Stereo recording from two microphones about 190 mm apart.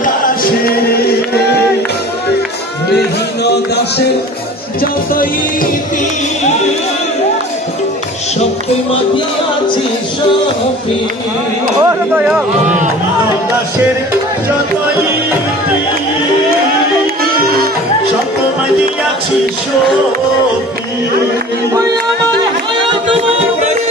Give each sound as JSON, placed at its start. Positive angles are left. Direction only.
{"t": 0.0, "sound": "music", "side_deg": 50}
{"t": 5.1, "sound": "music", "side_deg": 50}
{"t": 11.8, "sound": "speech", "side_deg": -15}